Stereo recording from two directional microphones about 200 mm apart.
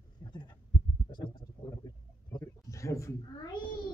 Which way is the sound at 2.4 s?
15° left (ahead or behind).